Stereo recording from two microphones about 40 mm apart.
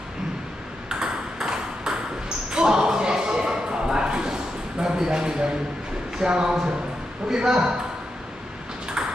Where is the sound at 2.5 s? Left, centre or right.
Centre.